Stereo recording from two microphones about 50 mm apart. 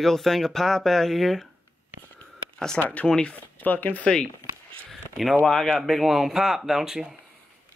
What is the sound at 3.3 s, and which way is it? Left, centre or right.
Speech, left.